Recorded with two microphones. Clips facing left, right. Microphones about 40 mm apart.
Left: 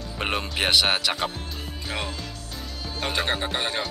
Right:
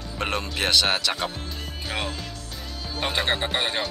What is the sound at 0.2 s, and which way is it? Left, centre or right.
Speech, centre.